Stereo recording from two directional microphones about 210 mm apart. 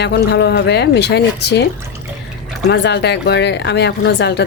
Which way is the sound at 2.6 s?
55° left (ahead or behind).